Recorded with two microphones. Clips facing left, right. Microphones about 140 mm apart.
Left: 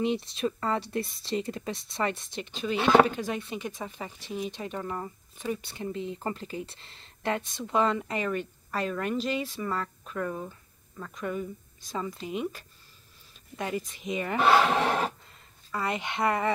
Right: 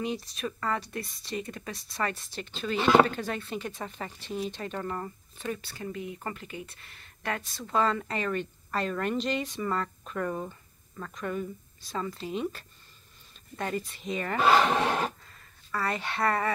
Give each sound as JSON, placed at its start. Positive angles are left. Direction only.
{"t": 0.0, "sound": "speech", "side_deg": 25}